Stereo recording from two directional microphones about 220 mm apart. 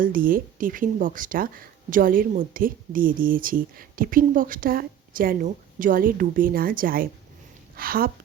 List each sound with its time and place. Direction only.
0.0 s speech: 40° right (ahead or behind)